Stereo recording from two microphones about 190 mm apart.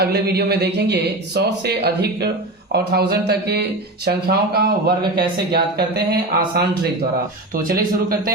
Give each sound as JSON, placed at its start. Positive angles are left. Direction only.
{"t": 0.0, "sound": "speech", "side_deg": -60}